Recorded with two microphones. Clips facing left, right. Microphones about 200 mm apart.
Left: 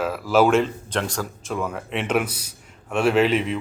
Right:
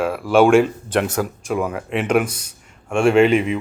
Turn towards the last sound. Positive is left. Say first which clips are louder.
# right 5 dB
turn(degrees=-5)  # may be behind; listen again after turning